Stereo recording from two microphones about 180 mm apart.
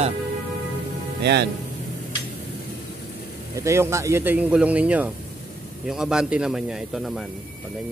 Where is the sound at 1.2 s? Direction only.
70° right (ahead or behind).